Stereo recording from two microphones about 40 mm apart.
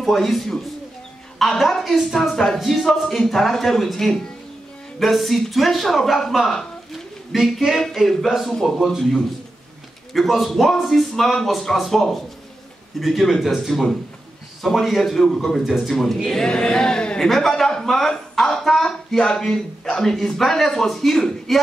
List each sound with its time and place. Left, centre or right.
0.0 s speech: centre
4.9 s speech: centre
10.1 s speech: centre
15.6 s speech: centre
16.6 s speech: centre
17.2 s speech: centre